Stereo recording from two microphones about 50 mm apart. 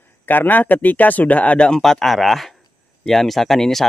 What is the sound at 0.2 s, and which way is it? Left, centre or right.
Speech, left.